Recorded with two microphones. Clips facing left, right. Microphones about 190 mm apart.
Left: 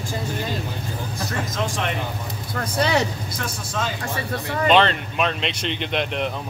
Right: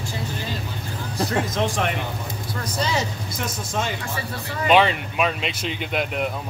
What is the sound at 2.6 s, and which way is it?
Speech, 60° left (ahead or behind).